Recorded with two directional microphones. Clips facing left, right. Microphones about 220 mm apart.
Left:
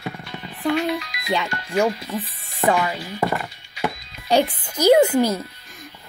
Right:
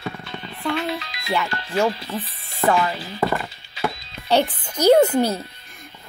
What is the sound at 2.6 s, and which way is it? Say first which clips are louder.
Speech: even; 15° left (ahead or behind).